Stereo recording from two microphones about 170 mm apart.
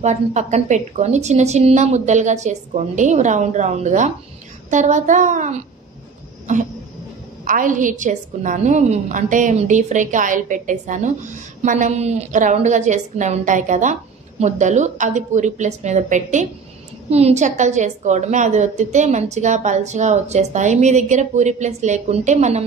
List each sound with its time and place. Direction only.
0.0 s a woman's voice: 45° right (ahead or behind)
7.4 s a woman's voice: 50° right (ahead or behind)